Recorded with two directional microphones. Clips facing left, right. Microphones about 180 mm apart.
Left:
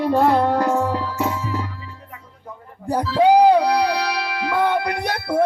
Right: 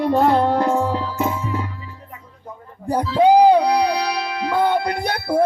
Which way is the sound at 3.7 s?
15° right (ahead or behind).